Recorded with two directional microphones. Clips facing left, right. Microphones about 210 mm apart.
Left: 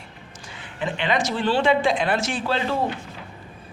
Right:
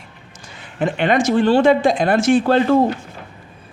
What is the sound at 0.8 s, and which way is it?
A man's voice, 50° right (ahead or behind).